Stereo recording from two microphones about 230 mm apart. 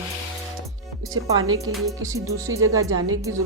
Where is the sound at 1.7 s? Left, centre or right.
Centre.